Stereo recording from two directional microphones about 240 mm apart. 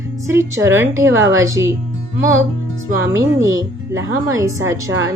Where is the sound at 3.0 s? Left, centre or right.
Centre.